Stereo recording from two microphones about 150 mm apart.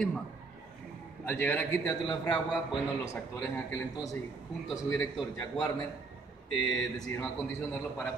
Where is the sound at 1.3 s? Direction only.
15° left (ahead or behind).